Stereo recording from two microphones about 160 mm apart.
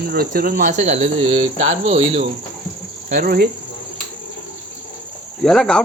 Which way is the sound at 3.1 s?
65° right (ahead or behind).